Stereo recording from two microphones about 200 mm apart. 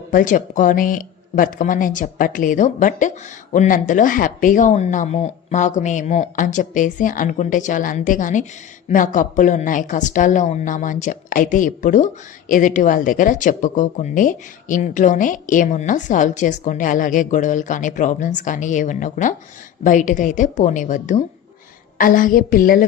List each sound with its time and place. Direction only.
0.1 s a woman's voice: 40° left (ahead or behind)